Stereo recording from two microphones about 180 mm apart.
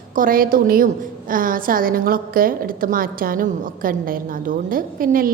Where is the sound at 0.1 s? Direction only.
50° right (ahead or behind).